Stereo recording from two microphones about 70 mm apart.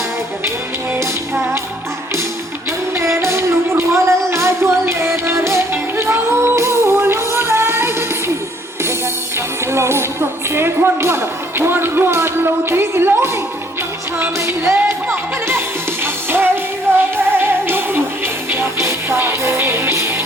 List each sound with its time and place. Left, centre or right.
3.0 s music: right
9.7 s music: right
14.3 s music: right
16.9 s music: right